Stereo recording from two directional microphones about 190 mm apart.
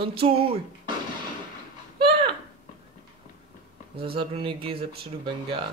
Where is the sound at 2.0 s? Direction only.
25° right (ahead or behind).